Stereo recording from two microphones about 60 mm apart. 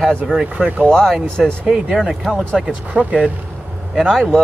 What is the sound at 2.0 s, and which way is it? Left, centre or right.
Speech, centre.